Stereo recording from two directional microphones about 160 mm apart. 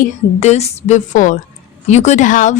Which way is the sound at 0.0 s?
45° left (ahead or behind).